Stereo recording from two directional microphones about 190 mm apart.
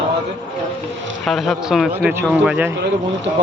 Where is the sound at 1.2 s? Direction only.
Centre (ahead or behind).